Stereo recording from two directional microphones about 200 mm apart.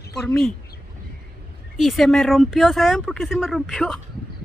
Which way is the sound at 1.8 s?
Centre (ahead or behind).